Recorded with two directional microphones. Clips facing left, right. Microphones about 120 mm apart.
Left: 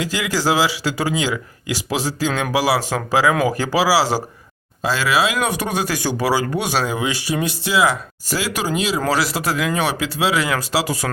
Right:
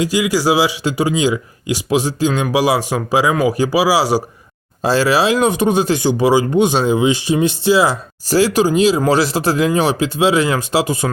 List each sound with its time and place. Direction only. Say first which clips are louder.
0.0 s speech: right 5 dB; 15° right (ahead or behind)
4.8 s speech: right 5 dB; 35° right (ahead or behind)